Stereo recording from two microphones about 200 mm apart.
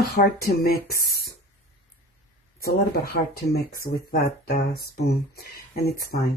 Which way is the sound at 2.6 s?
50° left (ahead or behind).